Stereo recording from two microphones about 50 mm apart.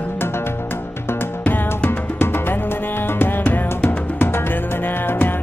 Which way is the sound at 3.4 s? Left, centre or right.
Left.